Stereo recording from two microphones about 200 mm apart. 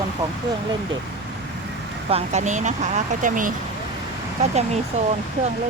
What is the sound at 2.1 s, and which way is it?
Speech, 35° right (ahead or behind).